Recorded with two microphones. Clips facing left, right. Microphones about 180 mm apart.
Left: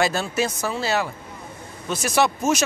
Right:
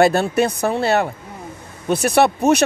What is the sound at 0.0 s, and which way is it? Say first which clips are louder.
Speech: right 7 dB; 60° right (ahead or behind).